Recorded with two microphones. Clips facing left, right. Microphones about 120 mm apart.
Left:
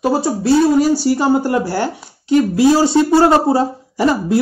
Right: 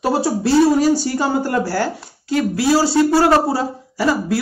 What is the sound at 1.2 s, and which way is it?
Speech, 15° left (ahead or behind).